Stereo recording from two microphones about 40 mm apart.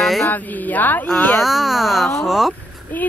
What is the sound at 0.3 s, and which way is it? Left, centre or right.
Speech, left.